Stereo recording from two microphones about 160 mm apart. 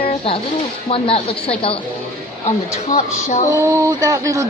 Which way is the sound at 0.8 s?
35° left (ahead or behind).